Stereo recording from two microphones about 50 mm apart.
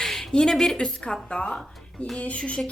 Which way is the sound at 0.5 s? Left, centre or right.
Centre.